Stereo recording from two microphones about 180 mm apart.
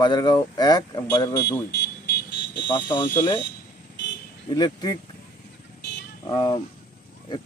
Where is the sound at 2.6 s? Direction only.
25° left (ahead or behind).